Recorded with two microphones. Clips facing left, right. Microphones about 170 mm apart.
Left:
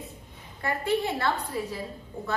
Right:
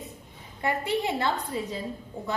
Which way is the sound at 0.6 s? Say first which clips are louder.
Even; 20° right (ahead or behind).